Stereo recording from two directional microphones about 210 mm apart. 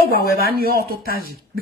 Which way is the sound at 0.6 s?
45° right (ahead or behind).